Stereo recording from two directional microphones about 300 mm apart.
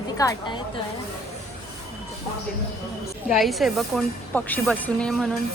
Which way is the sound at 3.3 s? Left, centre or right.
Centre.